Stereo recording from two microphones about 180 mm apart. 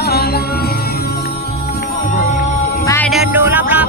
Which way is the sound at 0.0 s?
60° left (ahead or behind).